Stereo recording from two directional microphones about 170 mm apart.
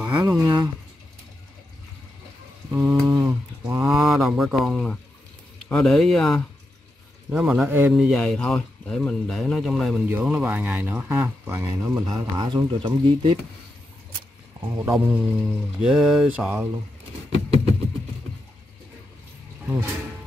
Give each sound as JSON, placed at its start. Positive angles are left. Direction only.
{"t": 0.0, "sound": "speech", "side_deg": -20}
{"t": 2.7, "sound": "a sound", "side_deg": -20}
{"t": 3.8, "sound": "speech", "side_deg": 0}
{"t": 7.9, "sound": "speech", "side_deg": 0}
{"t": 10.0, "sound": "speech", "side_deg": -10}
{"t": 14.6, "sound": "speech", "side_deg": -25}
{"t": 15.0, "sound": "speech", "side_deg": -5}